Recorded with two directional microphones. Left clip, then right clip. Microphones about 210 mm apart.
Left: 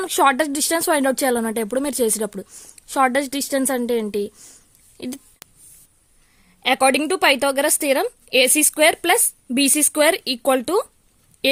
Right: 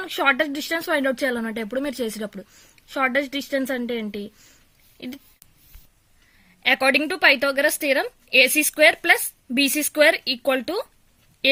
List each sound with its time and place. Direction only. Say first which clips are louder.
0.0 s speech: left 4 dB; 55° left (ahead or behind)
6.6 s speech: left 2 dB; 50° left (ahead or behind)